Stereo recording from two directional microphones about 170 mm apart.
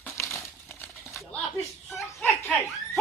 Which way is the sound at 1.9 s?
15° left (ahead or behind).